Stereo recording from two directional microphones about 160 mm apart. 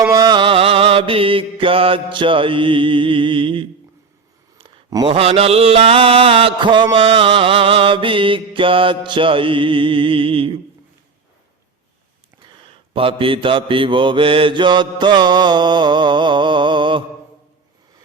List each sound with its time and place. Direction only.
0.1 s mantra: 25° right (ahead or behind)
4.5 s a sound: 30° right (ahead or behind)
5.1 s mantra: 40° right (ahead or behind)
12.5 s mantra: 35° right (ahead or behind)